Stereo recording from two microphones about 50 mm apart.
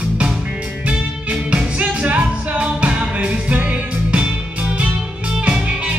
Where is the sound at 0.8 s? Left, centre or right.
Right.